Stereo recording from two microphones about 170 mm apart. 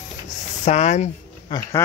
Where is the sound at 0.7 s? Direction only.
40° left (ahead or behind).